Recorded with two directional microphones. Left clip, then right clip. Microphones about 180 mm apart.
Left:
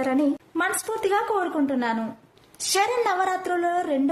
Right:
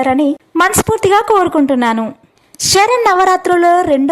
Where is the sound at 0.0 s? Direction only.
40° right (ahead or behind).